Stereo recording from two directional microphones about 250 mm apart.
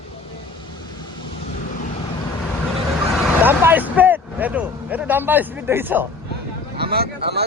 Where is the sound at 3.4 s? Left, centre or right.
Centre.